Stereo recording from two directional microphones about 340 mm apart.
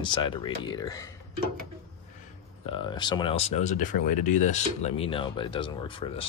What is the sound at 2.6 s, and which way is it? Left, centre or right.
Speech, centre.